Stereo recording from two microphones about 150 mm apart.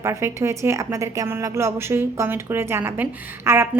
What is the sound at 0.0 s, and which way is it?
A woman's voice, 20° right (ahead or behind).